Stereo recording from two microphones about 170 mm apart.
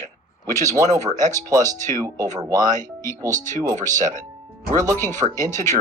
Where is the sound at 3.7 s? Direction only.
50° right (ahead or behind).